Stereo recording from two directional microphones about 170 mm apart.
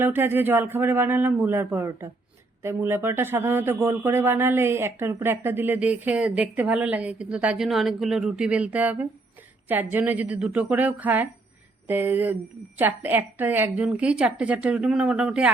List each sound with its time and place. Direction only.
0.0 s a man's voice: 15° right (ahead or behind)